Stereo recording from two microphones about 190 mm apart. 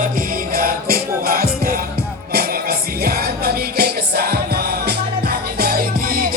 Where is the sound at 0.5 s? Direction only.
50° right (ahead or behind).